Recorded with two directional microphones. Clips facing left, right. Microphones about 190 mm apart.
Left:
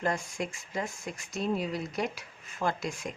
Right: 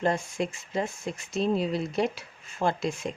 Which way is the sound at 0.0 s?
25° right (ahead or behind).